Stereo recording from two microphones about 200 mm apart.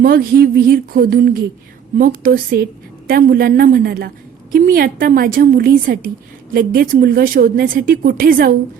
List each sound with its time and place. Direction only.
0.0 s a woman's voice: 45° right (ahead or behind)